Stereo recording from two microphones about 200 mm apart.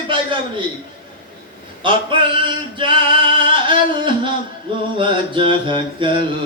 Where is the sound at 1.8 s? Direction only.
25° right (ahead or behind).